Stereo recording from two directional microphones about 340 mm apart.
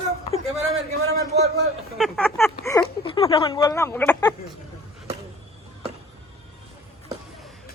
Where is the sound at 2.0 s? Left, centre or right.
Centre.